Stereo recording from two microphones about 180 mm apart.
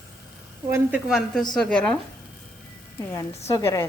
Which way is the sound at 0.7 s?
10° right (ahead or behind).